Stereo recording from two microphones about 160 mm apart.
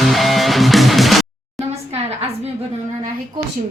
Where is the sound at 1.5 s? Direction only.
40° right (ahead or behind).